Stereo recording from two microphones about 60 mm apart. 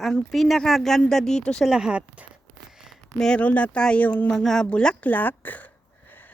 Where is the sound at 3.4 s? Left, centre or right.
Left.